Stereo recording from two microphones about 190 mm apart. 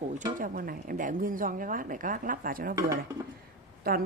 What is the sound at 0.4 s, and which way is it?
A woman's voice, 50° right (ahead or behind).